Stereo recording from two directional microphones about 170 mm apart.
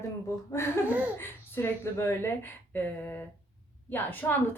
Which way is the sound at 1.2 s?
15° left (ahead or behind).